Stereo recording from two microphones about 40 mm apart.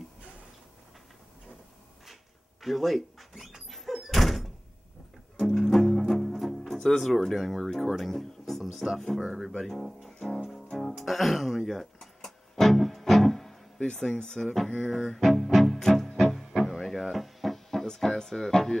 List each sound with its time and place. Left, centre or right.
2.6 s speech: centre
3.6 s door: centre
5.6 s music: centre
6.9 s speech: centre
9.2 s speech: centre
10.7 s music: centre
13.9 s speech: centre
14.8 s music: centre